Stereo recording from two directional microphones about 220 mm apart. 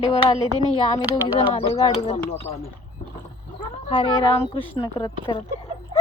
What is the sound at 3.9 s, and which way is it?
A woman's voice, 20° left (ahead or behind).